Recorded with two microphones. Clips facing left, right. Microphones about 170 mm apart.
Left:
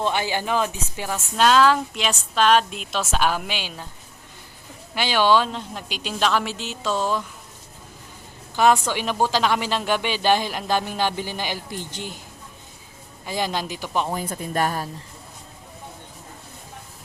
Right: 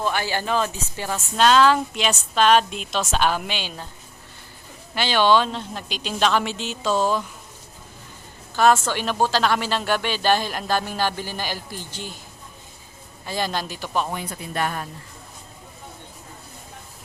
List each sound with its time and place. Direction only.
0.0 s speech: 20° left (ahead or behind)
4.9 s speech: 10° left (ahead or behind)
8.5 s a woman's voice: 15° left (ahead or behind)
13.2 s speech: 15° left (ahead or behind)
14.1 s speech: 40° left (ahead or behind)